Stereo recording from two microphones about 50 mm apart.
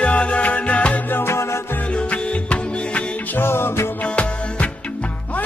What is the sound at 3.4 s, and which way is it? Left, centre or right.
Music, left.